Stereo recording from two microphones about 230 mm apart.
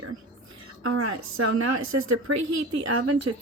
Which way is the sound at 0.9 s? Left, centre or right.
Right.